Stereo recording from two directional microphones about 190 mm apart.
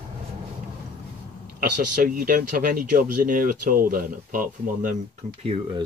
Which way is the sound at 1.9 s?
45° right (ahead or behind).